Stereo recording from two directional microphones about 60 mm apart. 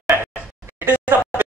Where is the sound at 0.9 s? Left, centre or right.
Left.